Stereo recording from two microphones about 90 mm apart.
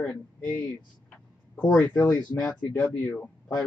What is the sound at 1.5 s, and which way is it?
Speech, 10° left (ahead or behind).